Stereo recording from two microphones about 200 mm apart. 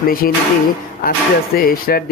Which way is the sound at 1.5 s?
45° left (ahead or behind).